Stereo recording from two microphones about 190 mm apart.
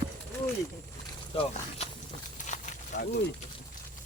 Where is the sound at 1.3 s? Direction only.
35° left (ahead or behind).